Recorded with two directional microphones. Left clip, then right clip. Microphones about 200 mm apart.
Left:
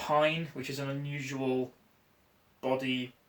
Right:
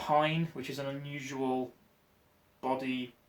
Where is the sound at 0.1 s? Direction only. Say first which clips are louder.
Left 1 dB; 15° right (ahead or behind).